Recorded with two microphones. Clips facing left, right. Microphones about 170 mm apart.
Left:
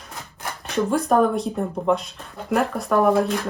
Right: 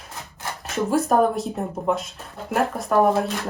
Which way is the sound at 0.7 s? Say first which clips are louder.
Left 1 dB; 5° right (ahead or behind).